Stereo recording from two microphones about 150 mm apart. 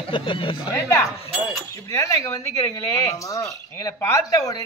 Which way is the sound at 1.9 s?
20° left (ahead or behind).